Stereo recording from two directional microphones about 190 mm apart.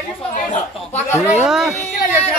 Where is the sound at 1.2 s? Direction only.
5° right (ahead or behind).